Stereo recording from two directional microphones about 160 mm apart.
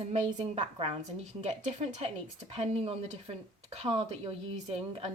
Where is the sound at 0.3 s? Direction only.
35° right (ahead or behind).